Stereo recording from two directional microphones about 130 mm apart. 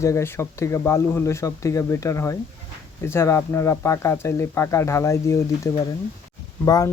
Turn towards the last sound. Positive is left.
turn(degrees=30)  # may be behind; listen again after turning